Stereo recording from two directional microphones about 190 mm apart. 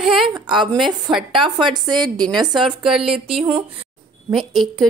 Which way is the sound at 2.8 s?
5° right (ahead or behind).